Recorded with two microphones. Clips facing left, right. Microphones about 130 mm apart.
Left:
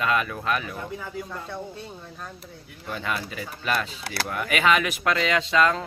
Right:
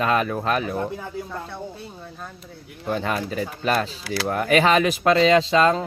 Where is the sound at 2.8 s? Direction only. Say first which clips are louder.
Right 6 dB; 40° right (ahead or behind).